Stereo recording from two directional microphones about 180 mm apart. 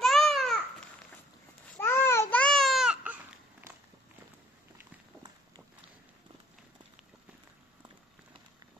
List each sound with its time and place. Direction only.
0.0 s babbling: centre (ahead or behind)
1.8 s baby cry: 15° left (ahead or behind); by 3.2 s 5° right (ahead or behind)